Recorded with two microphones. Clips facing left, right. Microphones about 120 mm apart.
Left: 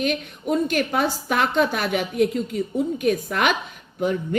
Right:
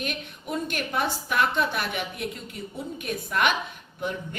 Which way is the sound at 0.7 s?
50° left (ahead or behind).